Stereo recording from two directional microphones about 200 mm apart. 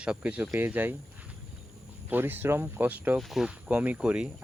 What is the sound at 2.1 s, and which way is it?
Speech, 10° right (ahead or behind).